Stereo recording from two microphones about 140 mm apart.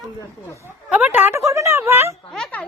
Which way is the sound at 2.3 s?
5° left (ahead or behind).